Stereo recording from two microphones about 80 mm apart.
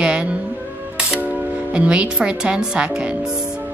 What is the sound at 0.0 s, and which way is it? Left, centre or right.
Music, centre.